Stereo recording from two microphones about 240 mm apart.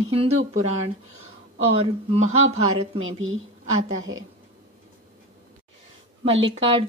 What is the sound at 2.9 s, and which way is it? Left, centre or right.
A woman's voice, right.